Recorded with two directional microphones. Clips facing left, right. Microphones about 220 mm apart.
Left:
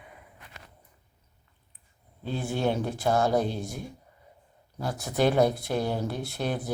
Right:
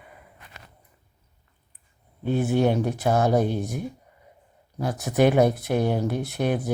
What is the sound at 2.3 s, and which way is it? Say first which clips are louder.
Speech: right 6 dB; 20° right (ahead or behind).